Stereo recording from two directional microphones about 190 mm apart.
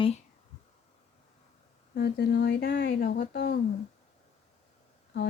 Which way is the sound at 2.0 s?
60° left (ahead or behind).